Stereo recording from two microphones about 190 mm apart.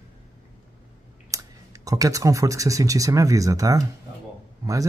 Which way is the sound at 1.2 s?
15° right (ahead or behind).